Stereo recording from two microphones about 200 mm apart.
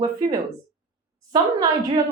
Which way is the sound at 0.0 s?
20° right (ahead or behind).